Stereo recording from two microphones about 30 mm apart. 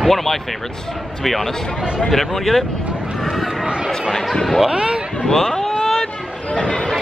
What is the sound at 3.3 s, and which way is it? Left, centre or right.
Chatter, centre.